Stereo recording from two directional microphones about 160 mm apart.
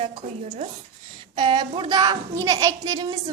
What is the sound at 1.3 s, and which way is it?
Speech, 30° right (ahead or behind).